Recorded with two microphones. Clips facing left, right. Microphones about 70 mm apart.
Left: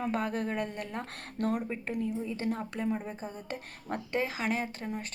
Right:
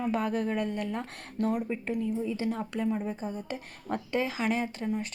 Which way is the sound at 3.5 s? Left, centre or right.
Left.